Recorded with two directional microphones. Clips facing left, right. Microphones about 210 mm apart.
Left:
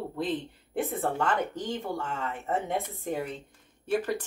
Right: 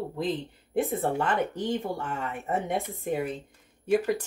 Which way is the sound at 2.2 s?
10° right (ahead or behind).